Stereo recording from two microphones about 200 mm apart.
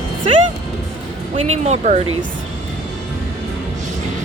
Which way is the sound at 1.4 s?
35° right (ahead or behind).